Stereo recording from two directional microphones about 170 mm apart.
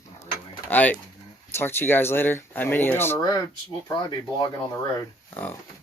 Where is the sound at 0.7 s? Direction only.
10° left (ahead or behind).